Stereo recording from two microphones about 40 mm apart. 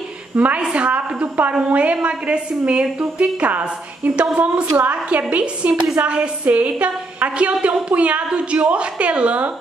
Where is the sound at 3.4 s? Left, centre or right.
Right.